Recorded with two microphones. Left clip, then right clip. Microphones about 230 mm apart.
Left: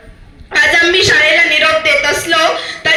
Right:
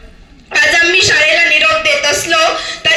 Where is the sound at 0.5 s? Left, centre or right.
Right.